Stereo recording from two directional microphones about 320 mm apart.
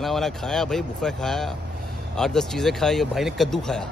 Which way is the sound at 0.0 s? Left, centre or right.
Centre.